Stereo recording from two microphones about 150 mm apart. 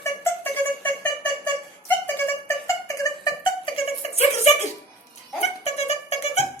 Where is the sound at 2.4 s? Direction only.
20° left (ahead or behind); by 6.4 s 45° left (ahead or behind).